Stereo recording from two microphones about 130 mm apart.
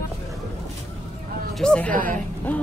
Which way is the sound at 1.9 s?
90° right.